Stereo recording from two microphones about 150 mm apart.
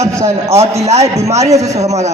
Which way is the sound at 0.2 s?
20° right (ahead or behind).